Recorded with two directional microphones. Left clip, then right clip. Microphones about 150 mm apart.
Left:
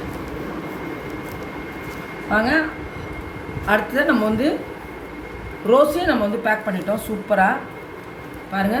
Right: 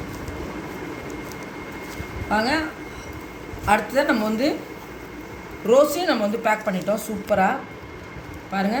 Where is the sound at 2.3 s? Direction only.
25° right (ahead or behind).